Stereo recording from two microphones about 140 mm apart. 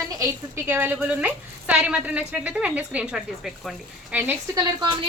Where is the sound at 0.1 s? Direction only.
20° right (ahead or behind); by 3.8 s centre (ahead or behind).